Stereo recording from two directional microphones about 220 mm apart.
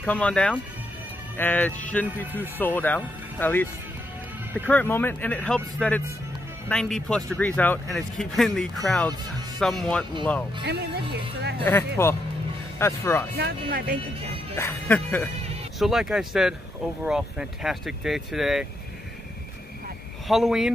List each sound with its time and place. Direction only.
0.0 s speech: 5° left (ahead or behind)
4.6 s speech: 10° left (ahead or behind)
10.6 s speech: 50° right (ahead or behind)
11.6 s speech: 10° left (ahead or behind)
13.4 s speech: 45° right (ahead or behind)
14.6 s speech: 10° left (ahead or behind)
20.2 s speech: centre (ahead or behind)